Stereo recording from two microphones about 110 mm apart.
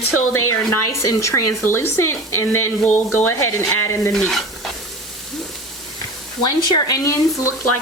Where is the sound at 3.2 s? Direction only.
25° left (ahead or behind).